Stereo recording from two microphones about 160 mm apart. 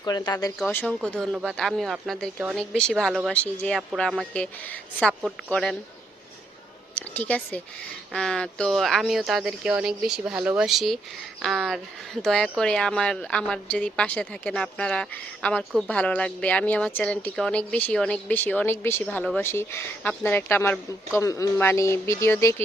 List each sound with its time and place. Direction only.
0.0 s speech: 25° left (ahead or behind)
0.6 s speech: 10° left (ahead or behind)
6.9 s a woman's voice: 10° left (ahead or behind)